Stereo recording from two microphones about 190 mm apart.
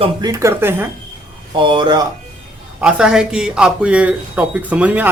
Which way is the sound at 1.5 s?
25° right (ahead or behind).